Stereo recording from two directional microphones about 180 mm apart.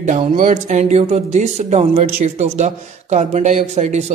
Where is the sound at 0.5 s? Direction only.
40° right (ahead or behind).